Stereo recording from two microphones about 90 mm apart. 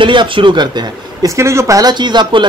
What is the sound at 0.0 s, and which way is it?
Speech, 65° right (ahead or behind).